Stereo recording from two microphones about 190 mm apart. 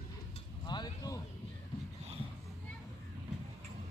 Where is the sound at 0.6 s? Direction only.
20° left (ahead or behind).